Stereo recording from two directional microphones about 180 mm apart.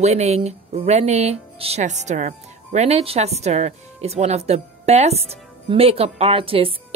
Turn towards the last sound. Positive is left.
turn(degrees=-30)  # may be behind; listen again after turning